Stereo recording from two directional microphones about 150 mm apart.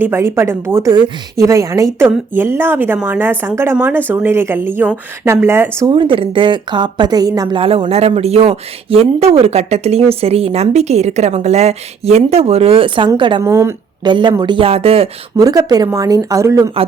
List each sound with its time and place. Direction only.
0.0 s a woman's voice: 15° right (ahead or behind)
5.8 s a woman's voice: 35° right (ahead or behind)
13.4 s speech: 20° right (ahead or behind)
14.1 s a woman's voice: 30° right (ahead or behind)
15.4 s speech: 25° right (ahead or behind)